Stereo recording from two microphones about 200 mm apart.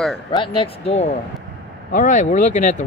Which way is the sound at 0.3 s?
25° left (ahead or behind).